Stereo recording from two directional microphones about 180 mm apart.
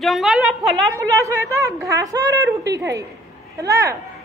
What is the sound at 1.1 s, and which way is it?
A woman's voice, 15° right (ahead or behind).